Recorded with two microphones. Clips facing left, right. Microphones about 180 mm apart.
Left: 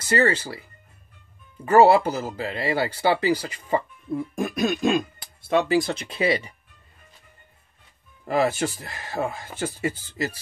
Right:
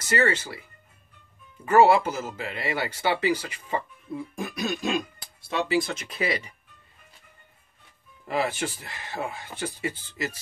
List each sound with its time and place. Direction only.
0.1 s speech: 35° left (ahead or behind)
1.7 s speech: 35° left (ahead or behind)
4.4 s throat clearing: 55° left (ahead or behind)
5.5 s speech: 45° left (ahead or behind); by 6.5 s 30° left (ahead or behind)
8.3 s speech: 40° left (ahead or behind)